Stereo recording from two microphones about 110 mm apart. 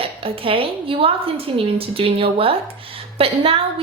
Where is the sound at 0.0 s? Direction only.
55° right (ahead or behind).